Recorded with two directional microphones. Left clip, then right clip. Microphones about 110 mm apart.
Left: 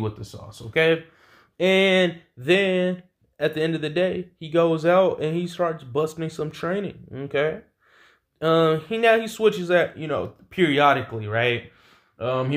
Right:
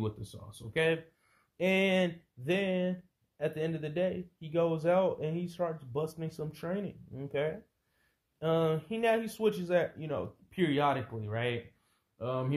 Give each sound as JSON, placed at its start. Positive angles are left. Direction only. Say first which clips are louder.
{"t": 0.0, "sound": "speech", "louder": "left 8 dB", "side_deg": -20}